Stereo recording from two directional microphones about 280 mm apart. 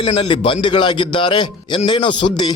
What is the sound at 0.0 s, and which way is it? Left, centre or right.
A man's voice, centre.